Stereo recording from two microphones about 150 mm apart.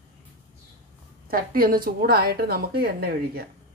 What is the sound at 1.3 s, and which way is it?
A woman's voice, 70° right (ahead or behind).